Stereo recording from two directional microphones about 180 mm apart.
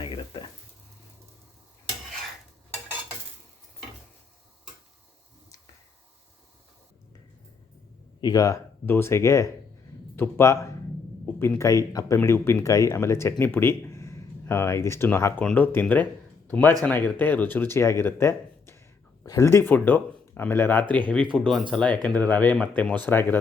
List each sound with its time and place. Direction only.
0.0 s a sound: 25° left (ahead or behind)
8.2 s speech: 20° left (ahead or behind); by 21.6 s 5° left (ahead or behind)
21.8 s speech: 25° right (ahead or behind)
22.1 s speech: 10° left (ahead or behind)